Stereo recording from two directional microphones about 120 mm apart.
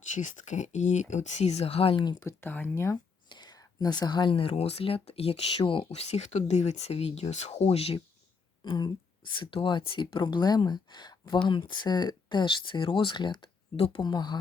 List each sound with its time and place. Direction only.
0.1 s speech: 90° left; by 2.1 s 45° left (ahead or behind)
2.2 s speech: 15° left (ahead or behind)
3.2 s speech: 35° left (ahead or behind)
5.9 s speech: 65° left (ahead or behind)
8.6 s speech: 40° left (ahead or behind)
14.0 s speech: 35° left (ahead or behind)